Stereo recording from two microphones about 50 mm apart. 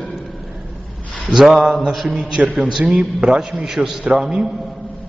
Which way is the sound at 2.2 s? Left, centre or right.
Centre.